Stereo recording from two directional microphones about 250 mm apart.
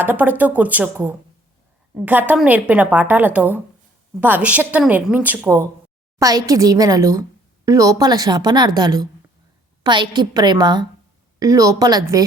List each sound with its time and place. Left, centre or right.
0.0 s a woman's voice: centre